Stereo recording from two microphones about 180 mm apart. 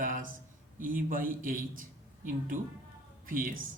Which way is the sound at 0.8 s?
50° right (ahead or behind).